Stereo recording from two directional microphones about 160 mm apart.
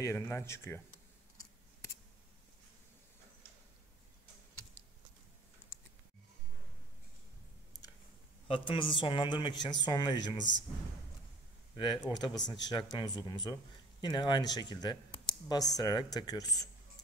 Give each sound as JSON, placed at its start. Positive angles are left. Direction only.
{"t": 0.0, "sound": "speech", "side_deg": 15}
{"t": 8.5, "sound": "a man's voice", "side_deg": 35}
{"t": 11.7, "sound": "speech", "side_deg": 30}